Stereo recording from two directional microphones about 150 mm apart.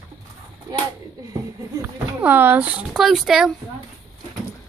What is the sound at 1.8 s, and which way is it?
Speech, 10° right (ahead or behind).